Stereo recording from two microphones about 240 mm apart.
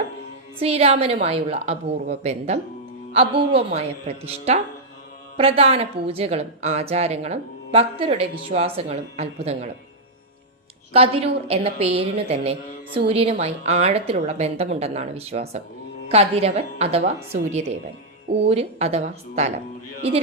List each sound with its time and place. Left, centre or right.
0.6 s a woman's voice: right
10.9 s a woman's voice: right